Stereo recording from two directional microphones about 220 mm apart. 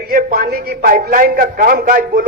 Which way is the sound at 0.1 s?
40° right (ahead or behind).